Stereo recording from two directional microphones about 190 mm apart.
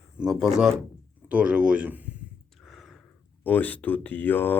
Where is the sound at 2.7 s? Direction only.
Centre (ahead or behind).